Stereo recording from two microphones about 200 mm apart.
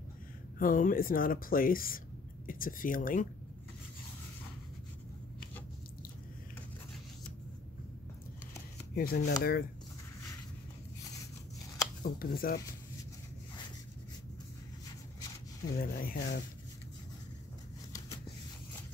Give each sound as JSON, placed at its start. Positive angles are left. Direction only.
{"t": 0.6, "sound": "speech", "side_deg": 45}
{"t": 8.9, "sound": "speech", "side_deg": 50}
{"t": 12.0, "sound": "speech", "side_deg": 45}
{"t": 15.8, "sound": "speech", "side_deg": 45}